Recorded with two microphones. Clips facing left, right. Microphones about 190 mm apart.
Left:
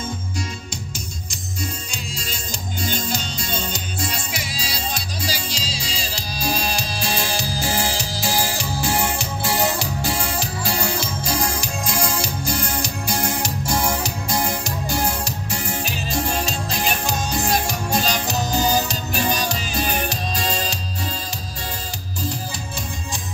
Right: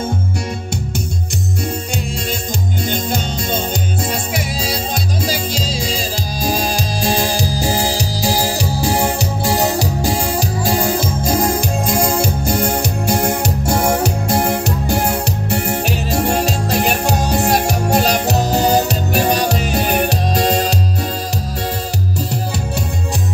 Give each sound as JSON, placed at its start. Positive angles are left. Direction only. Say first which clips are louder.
{"t": 2.8, "sound": "music", "louder": "right 3 dB", "side_deg": -55}